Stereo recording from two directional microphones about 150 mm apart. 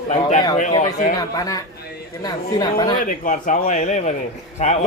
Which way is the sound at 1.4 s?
25° left (ahead or behind).